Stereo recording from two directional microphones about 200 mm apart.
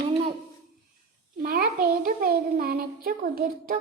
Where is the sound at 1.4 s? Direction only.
45° right (ahead or behind).